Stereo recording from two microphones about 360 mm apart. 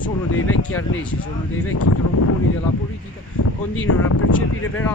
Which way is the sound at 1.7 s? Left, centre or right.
Left.